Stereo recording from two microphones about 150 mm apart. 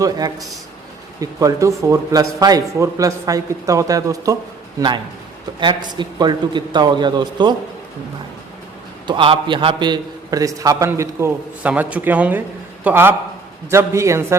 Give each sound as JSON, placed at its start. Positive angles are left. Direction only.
{"t": 0.0, "sound": "a man's voice", "side_deg": -25}
{"t": 5.5, "sound": "a man's voice", "side_deg": -30}
{"t": 9.0, "sound": "a man's voice", "side_deg": -35}